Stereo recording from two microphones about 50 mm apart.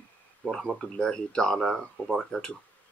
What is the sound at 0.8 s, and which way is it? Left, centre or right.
Speech, centre.